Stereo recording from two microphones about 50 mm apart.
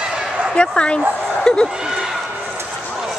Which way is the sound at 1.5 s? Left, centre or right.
Centre.